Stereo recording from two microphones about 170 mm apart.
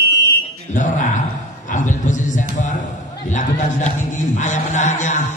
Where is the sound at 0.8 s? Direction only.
45° left (ahead or behind).